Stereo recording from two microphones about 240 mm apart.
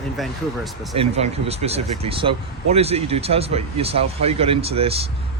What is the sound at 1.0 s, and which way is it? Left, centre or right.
Speech, right.